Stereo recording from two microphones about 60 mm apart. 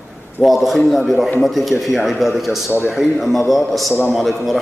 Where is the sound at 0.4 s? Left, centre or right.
Centre.